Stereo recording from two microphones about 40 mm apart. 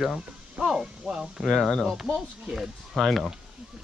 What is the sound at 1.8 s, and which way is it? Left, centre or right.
Speech, centre.